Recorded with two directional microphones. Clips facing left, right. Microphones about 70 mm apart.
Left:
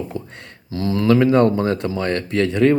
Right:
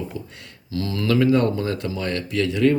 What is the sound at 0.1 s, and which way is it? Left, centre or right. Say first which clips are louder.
Speech: left 4 dB; left.